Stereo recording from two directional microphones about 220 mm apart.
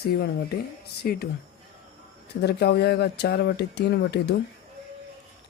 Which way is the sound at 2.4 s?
50° left (ahead or behind).